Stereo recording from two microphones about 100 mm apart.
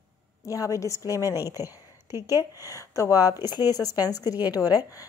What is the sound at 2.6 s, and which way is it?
A woman's voice, 35° left (ahead or behind).